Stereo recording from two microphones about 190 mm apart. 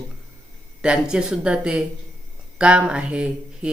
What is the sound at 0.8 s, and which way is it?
Speech, 5° right (ahead or behind).